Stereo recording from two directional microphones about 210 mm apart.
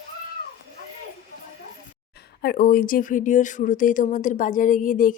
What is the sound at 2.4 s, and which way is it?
Speech, 45° left (ahead or behind).